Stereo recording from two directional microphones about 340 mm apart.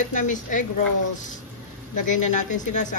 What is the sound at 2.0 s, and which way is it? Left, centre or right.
Speech, left.